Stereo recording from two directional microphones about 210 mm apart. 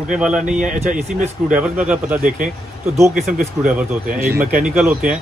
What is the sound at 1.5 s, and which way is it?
Speech, 5° right (ahead or behind).